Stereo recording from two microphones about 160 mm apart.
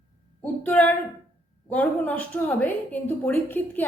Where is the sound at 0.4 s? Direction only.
10° left (ahead or behind).